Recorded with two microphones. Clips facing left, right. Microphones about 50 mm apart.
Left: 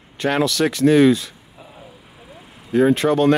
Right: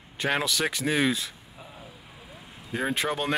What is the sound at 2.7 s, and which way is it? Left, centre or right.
Speech, centre.